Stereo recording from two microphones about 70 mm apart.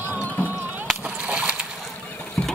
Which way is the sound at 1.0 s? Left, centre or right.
Centre.